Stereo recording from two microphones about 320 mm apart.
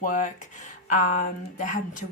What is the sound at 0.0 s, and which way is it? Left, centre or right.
Speech, left.